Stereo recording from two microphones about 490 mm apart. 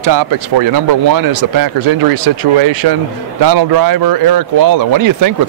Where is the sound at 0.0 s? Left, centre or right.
Right.